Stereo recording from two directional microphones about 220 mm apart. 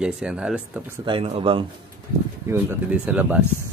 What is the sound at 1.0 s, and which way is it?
Speech, 25° right (ahead or behind).